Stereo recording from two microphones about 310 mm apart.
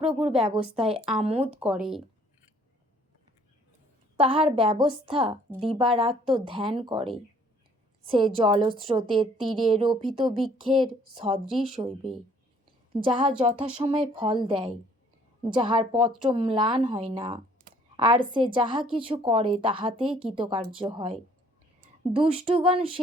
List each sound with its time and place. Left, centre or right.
0.2 s speech: centre
1.5 s speech: centre
4.2 s a woman's voice: centre
9.2 s speech: centre
9.6 s a woman's voice: centre